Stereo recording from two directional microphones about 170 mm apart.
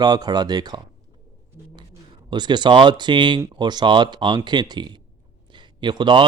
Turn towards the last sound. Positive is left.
turn(degrees=-25)  # may be behind; listen again after turning